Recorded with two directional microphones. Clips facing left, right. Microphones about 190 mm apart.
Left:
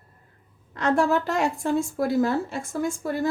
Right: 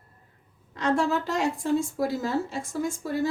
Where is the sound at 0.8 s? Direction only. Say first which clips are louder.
Left 3 dB; 55° left (ahead or behind).